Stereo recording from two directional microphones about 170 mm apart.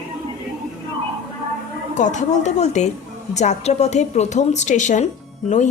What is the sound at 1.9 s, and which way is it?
A woman's voice, 45° left (ahead or behind).